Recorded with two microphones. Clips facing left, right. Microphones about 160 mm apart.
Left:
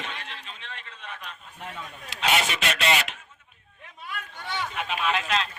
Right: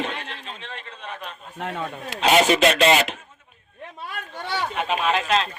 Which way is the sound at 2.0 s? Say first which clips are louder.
Right 8 dB; 35° right (ahead or behind).